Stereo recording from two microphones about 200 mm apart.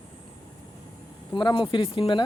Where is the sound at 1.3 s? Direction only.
20° left (ahead or behind).